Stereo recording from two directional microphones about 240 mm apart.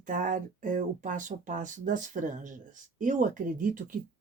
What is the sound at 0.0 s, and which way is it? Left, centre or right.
A woman's voice, right.